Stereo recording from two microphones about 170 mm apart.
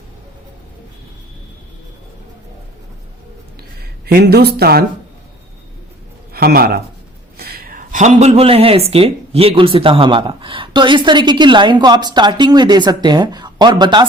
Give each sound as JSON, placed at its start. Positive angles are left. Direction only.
{"t": 3.6, "sound": "speech", "side_deg": -65}
{"t": 6.3, "sound": "speech", "side_deg": -60}